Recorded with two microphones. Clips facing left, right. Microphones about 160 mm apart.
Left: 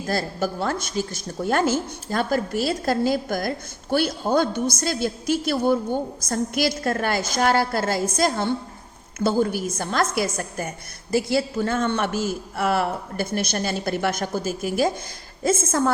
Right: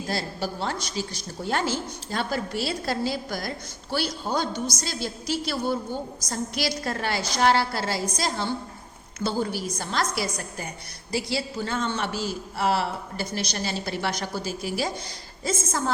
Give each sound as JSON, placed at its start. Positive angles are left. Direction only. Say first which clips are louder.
{"t": 0.1, "sound": "a woman's voice", "louder": "left 6 dB", "side_deg": 50}